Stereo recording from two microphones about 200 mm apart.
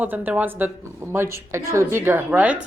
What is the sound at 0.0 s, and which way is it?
A woman's voice, 10° right (ahead or behind).